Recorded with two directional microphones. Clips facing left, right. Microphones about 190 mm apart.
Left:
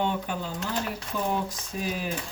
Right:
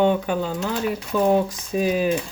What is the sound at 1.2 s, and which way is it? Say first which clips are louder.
Speech: right 11 dB; 90° right.